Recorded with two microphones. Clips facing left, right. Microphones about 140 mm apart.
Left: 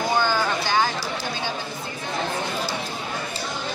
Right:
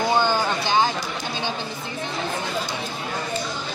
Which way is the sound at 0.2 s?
20° right (ahead or behind).